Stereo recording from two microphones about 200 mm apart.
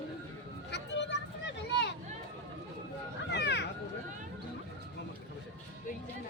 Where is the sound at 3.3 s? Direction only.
60° left (ahead or behind).